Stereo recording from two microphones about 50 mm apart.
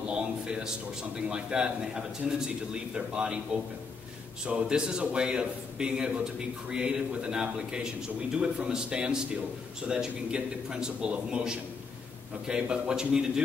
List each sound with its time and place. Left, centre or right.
0.1 s a sound: centre
1.3 s a man's voice: centre
4.5 s a man's voice: centre